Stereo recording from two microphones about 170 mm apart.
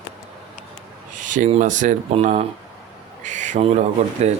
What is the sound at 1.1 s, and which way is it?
A man's voice, 50° right (ahead or behind).